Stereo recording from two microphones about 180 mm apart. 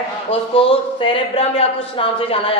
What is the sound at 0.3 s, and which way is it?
A woman's voice, 30° left (ahead or behind).